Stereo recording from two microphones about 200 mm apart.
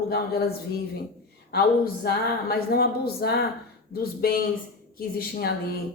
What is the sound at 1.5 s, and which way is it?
Speech, 50° left (ahead or behind).